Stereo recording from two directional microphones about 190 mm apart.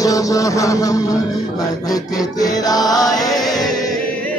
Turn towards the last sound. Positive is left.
turn(degrees=20)  # may be behind; listen again after turning